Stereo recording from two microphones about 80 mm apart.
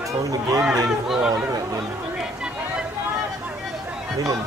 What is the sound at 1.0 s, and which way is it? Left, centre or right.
Speech, centre.